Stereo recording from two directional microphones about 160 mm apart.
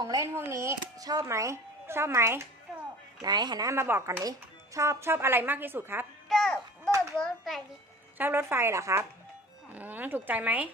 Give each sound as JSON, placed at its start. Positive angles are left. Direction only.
{"t": 0.0, "sound": "speech", "side_deg": -20}
{"t": 6.2, "sound": "music", "side_deg": 0}
{"t": 7.2, "sound": "a child's voice", "side_deg": 5}
{"t": 8.2, "sound": "speech", "side_deg": -15}